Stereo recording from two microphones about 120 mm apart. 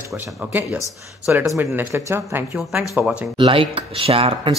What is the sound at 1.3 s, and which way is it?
Speech, 15° right (ahead or behind).